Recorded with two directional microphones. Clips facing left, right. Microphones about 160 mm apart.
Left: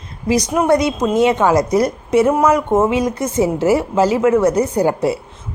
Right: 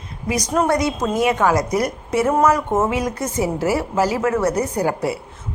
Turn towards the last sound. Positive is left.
turn(degrees=25)  # may be behind; listen again after turning